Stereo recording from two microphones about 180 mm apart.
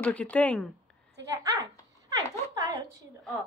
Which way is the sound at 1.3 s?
15° right (ahead or behind).